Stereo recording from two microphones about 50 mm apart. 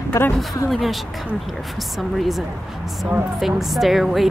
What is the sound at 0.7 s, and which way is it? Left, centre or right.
Speech, centre.